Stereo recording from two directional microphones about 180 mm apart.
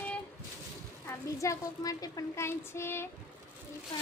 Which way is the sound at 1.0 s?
15° left (ahead or behind).